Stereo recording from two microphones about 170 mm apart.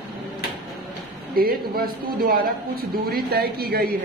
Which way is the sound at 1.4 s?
60° right (ahead or behind).